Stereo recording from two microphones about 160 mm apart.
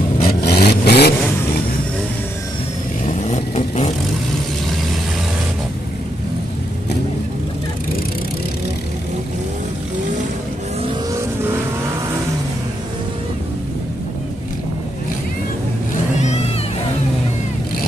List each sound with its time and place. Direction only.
0.2 s vehicle: 70° left (ahead or behind); by 1.1 s 90° left
3.1 s vehicle: 40° left (ahead or behind)